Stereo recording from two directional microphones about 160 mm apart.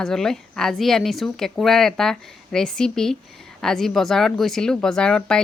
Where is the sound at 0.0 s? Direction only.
5° left (ahead or behind).